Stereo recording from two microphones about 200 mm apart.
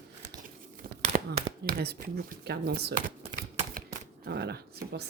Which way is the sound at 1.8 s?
55° right (ahead or behind).